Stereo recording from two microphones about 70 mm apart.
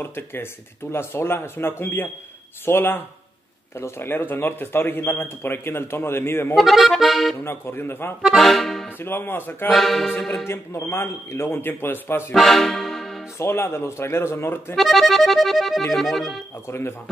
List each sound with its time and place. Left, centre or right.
0.0 s speech: left
6.5 s accordion: centre
7.4 s speech: left
8.2 s accordion: centre
9.0 s speech: left
9.8 s accordion: centre
10.4 s speech: left
12.4 s music: centre
13.4 s speech: left
14.8 s accordion: centre
16.6 s speech: left